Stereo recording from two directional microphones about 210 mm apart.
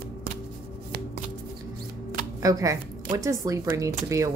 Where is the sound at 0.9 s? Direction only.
45° right (ahead or behind).